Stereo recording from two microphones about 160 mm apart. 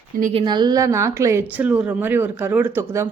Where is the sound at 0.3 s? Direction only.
25° right (ahead or behind).